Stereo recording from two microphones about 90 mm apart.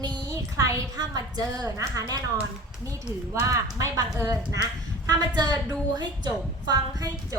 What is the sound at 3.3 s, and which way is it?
Speech, 35° right (ahead or behind).